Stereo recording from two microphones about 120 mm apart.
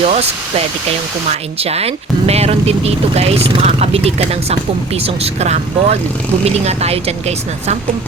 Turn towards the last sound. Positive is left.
turn(degrees=-65)  # may be behind; listen again after turning